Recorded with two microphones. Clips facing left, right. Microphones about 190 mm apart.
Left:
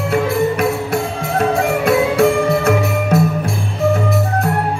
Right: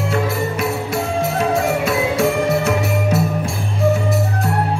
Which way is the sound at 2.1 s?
60° left (ahead or behind).